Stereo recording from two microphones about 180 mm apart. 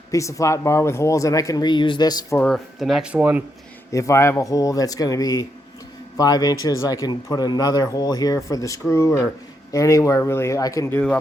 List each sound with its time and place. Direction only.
0.1 s speech: 15° left (ahead or behind)
2.4 s speech: centre (ahead or behind)
3.9 s speech: 15° left (ahead or behind)